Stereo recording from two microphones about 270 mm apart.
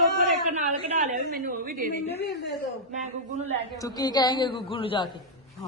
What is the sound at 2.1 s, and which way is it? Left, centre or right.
Speech, centre.